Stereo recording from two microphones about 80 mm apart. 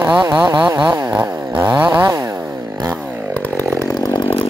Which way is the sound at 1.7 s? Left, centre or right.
Centre.